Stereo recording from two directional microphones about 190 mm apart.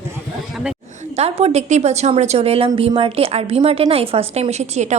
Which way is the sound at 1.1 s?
30° right (ahead or behind).